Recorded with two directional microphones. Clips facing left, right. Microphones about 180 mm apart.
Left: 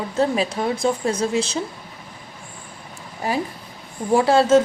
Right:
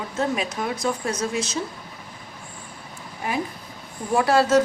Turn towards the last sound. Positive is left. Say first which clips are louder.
# left 3 dB
turn(degrees=25)  # may be behind; listen again after turning